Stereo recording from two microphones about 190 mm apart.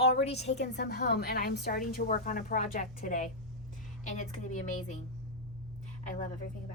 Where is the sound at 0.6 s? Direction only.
60° left (ahead or behind); by 4.9 s 40° left (ahead or behind).